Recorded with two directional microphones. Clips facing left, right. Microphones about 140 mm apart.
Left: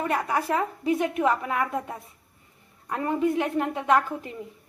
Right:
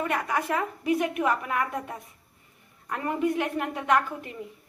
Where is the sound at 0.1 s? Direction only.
30° left (ahead or behind).